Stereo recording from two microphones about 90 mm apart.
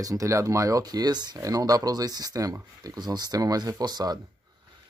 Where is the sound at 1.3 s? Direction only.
40° right (ahead or behind).